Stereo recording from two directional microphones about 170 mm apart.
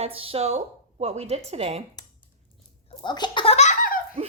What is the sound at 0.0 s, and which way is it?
A woman's voice, 35° right (ahead or behind).